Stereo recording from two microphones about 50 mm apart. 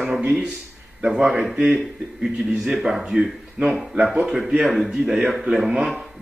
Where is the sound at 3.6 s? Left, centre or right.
Right.